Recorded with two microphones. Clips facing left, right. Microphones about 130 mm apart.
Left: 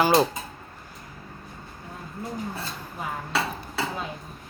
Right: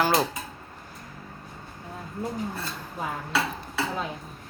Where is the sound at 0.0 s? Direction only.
20° left (ahead or behind).